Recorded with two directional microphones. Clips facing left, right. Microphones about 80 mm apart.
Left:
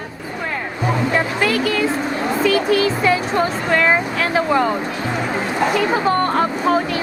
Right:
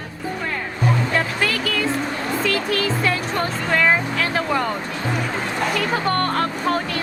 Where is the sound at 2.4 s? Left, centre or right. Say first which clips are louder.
Left 7 dB; centre.